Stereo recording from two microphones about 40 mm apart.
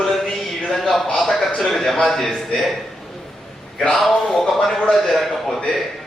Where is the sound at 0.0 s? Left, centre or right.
Centre.